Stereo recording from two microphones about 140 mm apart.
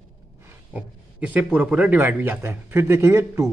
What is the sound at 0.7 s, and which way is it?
A man's voice, 10° right (ahead or behind).